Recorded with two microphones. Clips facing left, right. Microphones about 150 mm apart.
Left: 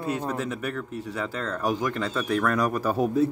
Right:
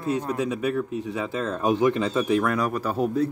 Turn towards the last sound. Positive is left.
turn(degrees=10)  # may be behind; listen again after turning